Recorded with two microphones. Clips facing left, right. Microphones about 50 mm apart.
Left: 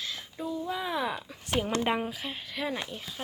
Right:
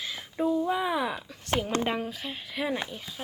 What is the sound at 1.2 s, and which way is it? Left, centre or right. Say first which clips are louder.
Speech: right 1 dB; centre.